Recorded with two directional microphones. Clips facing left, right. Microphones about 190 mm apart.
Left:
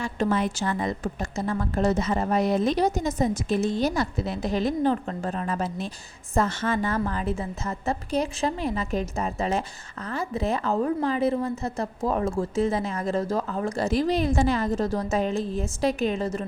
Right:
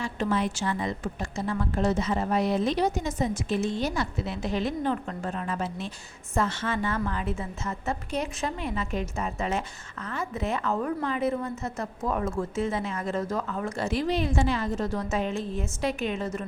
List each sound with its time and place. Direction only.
0.0 s a woman's voice: 45° left (ahead or behind)